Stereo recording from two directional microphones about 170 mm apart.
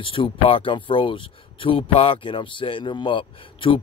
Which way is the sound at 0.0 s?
30° left (ahead or behind).